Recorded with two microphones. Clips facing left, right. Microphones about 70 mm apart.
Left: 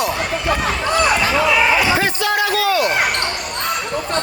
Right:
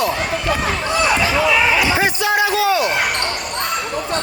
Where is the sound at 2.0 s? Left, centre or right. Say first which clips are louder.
Right 1 dB; centre.